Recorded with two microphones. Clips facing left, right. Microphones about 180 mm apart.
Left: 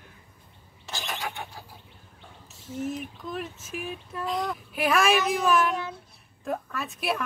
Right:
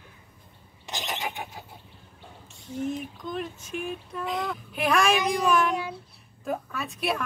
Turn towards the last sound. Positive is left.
turn(degrees=0)  # may be behind; listen again after turning